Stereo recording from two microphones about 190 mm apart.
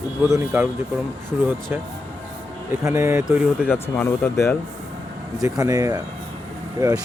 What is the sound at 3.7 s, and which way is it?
Speech, 10° left (ahead or behind).